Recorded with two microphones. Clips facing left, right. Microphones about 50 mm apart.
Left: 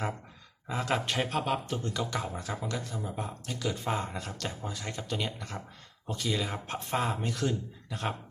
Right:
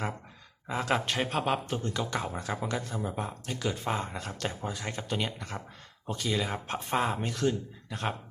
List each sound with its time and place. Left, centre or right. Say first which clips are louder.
0.7 s speech: right 1 dB; centre
3.5 s speech: even; centre
4.3 s speech: right 3 dB; centre